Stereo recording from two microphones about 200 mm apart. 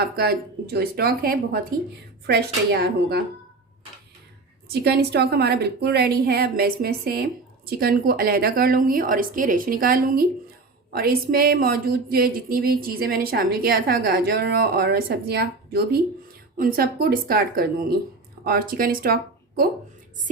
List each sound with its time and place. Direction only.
0.0 s speech: 50° right (ahead or behind)
4.7 s speech: 55° right (ahead or behind)